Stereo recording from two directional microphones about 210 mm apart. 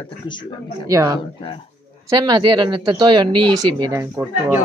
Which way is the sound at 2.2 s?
20° right (ahead or behind).